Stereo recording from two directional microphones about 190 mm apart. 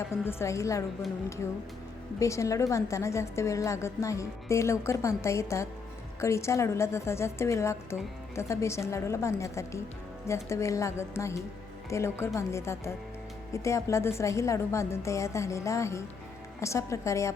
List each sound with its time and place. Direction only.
0.3 s a woman's voice: 15° left (ahead or behind)
2.1 s a woman's voice: 15° left (ahead or behind)